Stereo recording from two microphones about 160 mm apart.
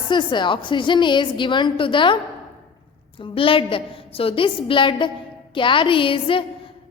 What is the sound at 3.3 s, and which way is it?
A woman's voice, 35° left (ahead or behind).